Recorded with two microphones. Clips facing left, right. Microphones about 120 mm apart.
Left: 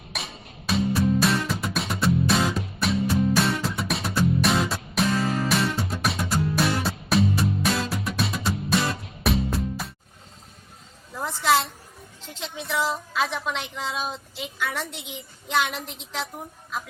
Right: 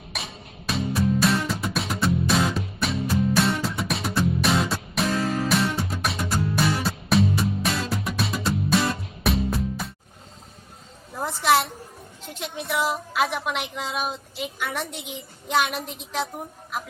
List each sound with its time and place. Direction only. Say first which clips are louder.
0.1 s music: even; centre (ahead or behind)
11.1 s a sound: right 1 dB; 20° right (ahead or behind)
12.3 s a woman's voice: right 1 dB; 10° right (ahead or behind)